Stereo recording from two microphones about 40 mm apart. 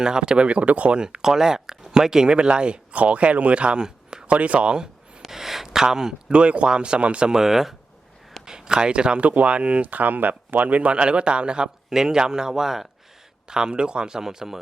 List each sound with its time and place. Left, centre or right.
0.0 s speech: right
0.9 s speech: centre
2.9 s speech: right
5.3 s a sound: centre
6.3 s speech: right
7.3 s speech: centre
8.4 s speech: centre
9.2 s speech: right
9.8 s speech: right; by 14.6 s centre